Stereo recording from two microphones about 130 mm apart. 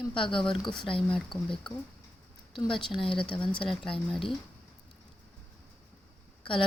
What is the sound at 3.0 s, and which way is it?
Speech, 40° left (ahead or behind).